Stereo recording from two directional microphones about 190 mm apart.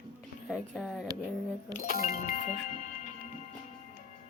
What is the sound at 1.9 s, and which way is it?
Speech, 45° left (ahead or behind).